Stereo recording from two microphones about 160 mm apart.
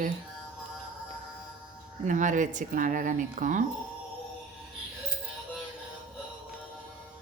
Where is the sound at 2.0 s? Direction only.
50° right (ahead or behind).